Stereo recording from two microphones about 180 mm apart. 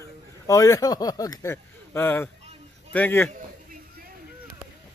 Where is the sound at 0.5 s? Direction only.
20° left (ahead or behind).